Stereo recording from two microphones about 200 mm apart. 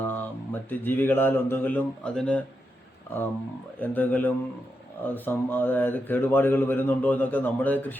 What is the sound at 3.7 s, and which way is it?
Speech, 10° left (ahead or behind).